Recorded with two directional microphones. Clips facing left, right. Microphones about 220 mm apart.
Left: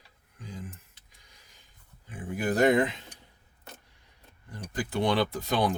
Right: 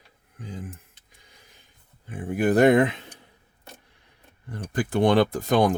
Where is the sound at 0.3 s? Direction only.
55° right (ahead or behind).